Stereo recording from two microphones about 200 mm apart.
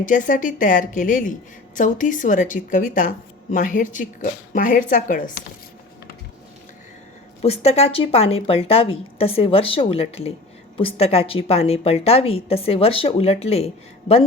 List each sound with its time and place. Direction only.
0.0 s a woman's voice: 40° left (ahead or behind)
7.4 s speech: 30° left (ahead or behind)